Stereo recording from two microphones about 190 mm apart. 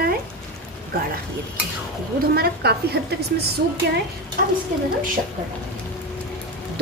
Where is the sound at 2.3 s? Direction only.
55° right (ahead or behind).